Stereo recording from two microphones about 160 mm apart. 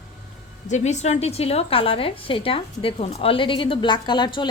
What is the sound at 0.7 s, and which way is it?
A woman's voice, 45° left (ahead or behind).